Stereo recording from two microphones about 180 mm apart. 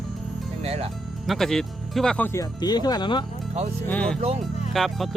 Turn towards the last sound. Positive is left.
turn(degrees=0)  # may be behind; listen again after turning